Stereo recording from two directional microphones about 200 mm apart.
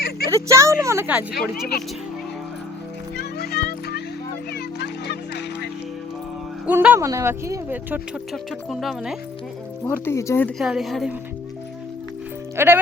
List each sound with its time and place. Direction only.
0.3 s speech: 15° right (ahead or behind)
1.7 s speech: 50° left (ahead or behind)
3.3 s music: 50° left (ahead or behind)
6.7 s speech: 10° right (ahead or behind)
9.8 s speech: 10° left (ahead or behind)
10.6 s a woman's voice: centre (ahead or behind)
12.5 s speech: 10° right (ahead or behind)